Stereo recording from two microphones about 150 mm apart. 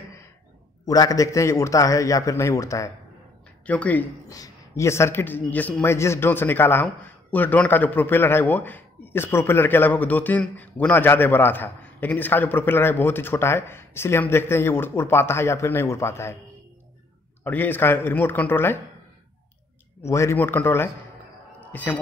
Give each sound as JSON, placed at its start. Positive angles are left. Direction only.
{"t": 0.8, "sound": "a man's voice", "side_deg": 25}
{"t": 3.6, "sound": "a man's voice", "side_deg": 10}
{"t": 4.3, "sound": "a man's voice", "side_deg": 20}
{"t": 17.4, "sound": "a man's voice", "side_deg": 15}
{"t": 20.0, "sound": "a man's voice", "side_deg": 20}
{"t": 21.5, "sound": "a sound", "side_deg": 10}